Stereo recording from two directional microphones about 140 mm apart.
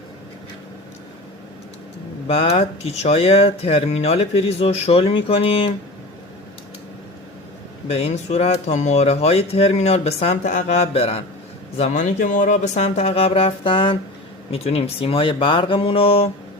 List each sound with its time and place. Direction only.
2.2 s speech: 40° left (ahead or behind)
7.9 s speech: 50° left (ahead or behind)
10.5 s speech: 65° left (ahead or behind)
10.9 s speech: 40° left (ahead or behind)
11.8 s speech: 65° left (ahead or behind); by 16.3 s 40° left (ahead or behind)